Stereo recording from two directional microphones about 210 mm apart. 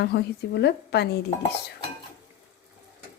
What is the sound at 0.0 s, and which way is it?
A woman's voice, 50° left (ahead or behind).